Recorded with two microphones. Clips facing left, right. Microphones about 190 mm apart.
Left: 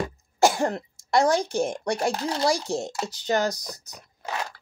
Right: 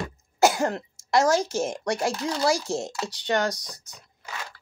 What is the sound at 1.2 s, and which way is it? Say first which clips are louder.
Speech: even; 35° left (ahead or behind).